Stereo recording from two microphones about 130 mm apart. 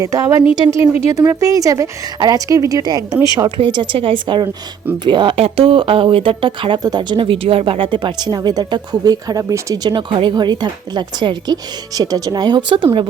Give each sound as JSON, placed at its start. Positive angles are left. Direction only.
{"t": 0.0, "sound": "speech", "side_deg": -25}